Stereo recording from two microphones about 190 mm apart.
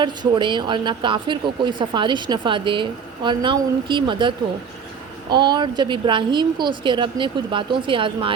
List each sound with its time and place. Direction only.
0.0 s speech: 25° right (ahead or behind)